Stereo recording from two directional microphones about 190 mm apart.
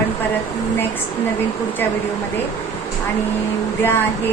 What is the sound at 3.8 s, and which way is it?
Speech, 10° left (ahead or behind).